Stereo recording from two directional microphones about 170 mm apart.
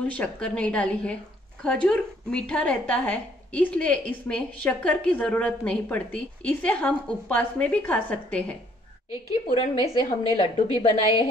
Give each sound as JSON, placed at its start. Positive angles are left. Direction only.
{"t": 0.0, "sound": "a woman's voice", "side_deg": 5}
{"t": 9.5, "sound": "a woman's voice", "side_deg": 35}